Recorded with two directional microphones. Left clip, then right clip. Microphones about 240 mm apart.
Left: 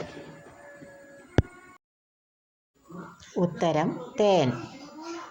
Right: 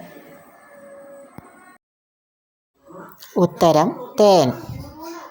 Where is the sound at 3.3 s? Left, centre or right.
Right.